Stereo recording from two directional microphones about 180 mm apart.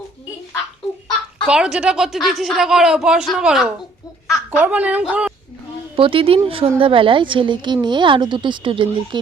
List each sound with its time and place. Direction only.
1.5 s a woman's voice: 5° right (ahead or behind)
6.0 s a woman's voice: 30° right (ahead or behind)